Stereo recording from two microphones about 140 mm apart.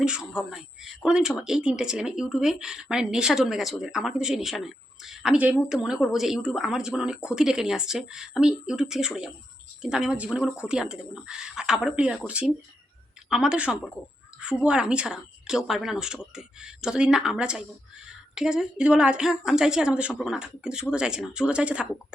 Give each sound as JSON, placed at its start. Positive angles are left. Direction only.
{"t": 0.0, "sound": "speech", "side_deg": -5}